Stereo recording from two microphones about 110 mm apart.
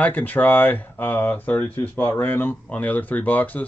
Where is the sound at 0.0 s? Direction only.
15° left (ahead or behind).